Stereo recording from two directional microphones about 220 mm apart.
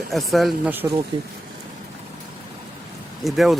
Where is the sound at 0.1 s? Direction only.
Centre (ahead or behind).